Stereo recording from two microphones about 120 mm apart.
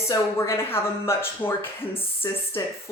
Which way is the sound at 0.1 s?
25° left (ahead or behind).